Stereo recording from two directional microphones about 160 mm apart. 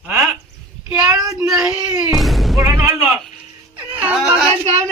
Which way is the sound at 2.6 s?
15° right (ahead or behind).